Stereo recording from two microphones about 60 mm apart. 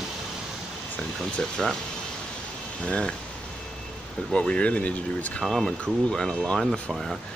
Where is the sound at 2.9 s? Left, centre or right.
Left.